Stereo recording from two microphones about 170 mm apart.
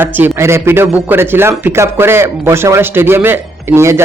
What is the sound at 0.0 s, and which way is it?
A man's voice, 10° right (ahead or behind).